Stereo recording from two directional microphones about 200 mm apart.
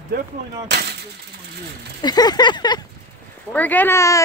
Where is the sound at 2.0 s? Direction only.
20° left (ahead or behind).